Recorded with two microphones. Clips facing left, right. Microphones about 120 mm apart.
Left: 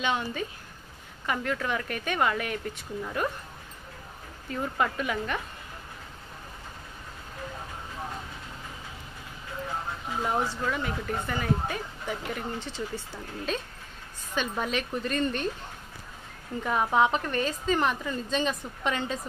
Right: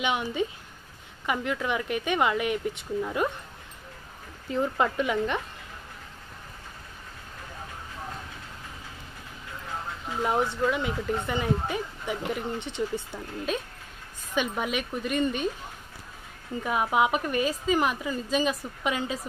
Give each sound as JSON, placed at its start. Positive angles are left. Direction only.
{"t": 0.0, "sound": "a woman's voice", "side_deg": -15}
{"t": 4.5, "sound": "speech", "side_deg": -25}
{"t": 10.2, "sound": "a woman's voice", "side_deg": -15}
{"t": 16.6, "sound": "a woman's voice", "side_deg": -10}